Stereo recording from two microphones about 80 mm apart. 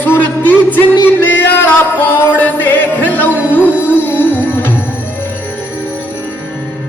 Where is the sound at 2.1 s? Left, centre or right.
Left.